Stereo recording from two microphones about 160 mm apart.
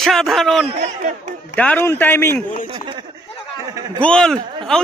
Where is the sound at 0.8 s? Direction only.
50° right (ahead or behind).